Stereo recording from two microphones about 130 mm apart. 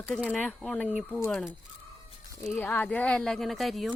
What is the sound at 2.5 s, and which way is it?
Speech, 15° left (ahead or behind).